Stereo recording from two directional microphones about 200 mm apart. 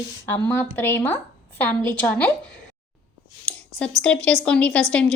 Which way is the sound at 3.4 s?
5° left (ahead or behind).